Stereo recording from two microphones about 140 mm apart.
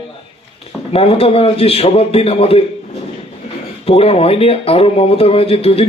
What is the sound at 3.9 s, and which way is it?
Speech, 45° left (ahead or behind).